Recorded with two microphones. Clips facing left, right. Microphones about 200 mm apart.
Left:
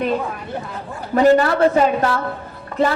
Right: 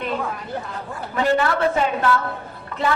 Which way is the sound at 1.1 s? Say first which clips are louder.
Left 6 dB; 40° left (ahead or behind).